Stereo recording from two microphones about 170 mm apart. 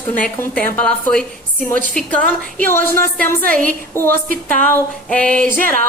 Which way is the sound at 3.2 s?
15° left (ahead or behind).